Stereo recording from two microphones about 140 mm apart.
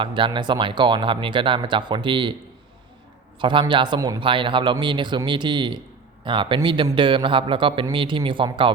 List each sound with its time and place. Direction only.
0.0 s speech: 35° right (ahead or behind)
3.4 s speech: 35° right (ahead or behind)